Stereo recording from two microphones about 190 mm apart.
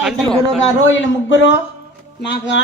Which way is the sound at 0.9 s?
75° left (ahead or behind).